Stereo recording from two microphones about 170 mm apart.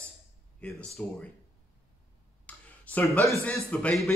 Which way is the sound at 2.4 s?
10° left (ahead or behind).